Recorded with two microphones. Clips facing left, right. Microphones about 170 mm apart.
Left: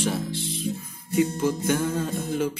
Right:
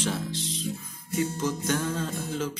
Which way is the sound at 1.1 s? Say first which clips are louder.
Left 5 dB; 10° left (ahead or behind).